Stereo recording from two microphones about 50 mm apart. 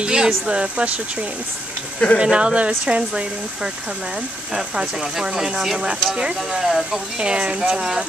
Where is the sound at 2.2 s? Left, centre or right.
Centre.